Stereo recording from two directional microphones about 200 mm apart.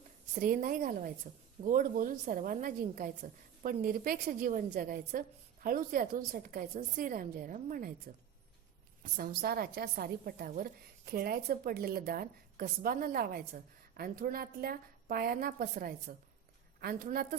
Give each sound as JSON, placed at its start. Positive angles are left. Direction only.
{"t": 0.3, "sound": "a woman's voice", "side_deg": -40}
{"t": 9.1, "sound": "a woman's voice", "side_deg": -50}